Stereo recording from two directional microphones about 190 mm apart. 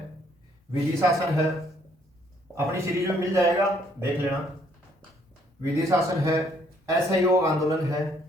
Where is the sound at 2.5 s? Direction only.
15° right (ahead or behind).